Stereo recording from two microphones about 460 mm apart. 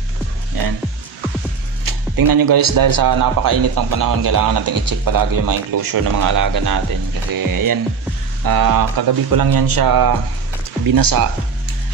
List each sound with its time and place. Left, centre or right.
1.9 s speech: right